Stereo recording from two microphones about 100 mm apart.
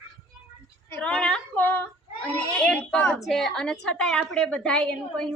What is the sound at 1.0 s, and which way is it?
Female singing, 10° left (ahead or behind).